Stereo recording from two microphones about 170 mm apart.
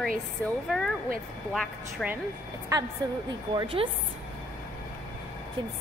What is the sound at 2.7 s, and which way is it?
A woman's voice, 25° right (ahead or behind).